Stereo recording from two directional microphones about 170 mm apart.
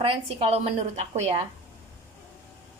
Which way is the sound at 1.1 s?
40° right (ahead or behind).